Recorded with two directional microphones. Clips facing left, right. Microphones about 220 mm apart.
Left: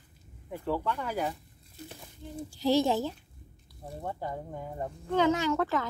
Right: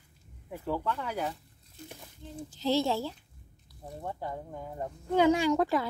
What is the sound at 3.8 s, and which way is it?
Speech, centre (ahead or behind).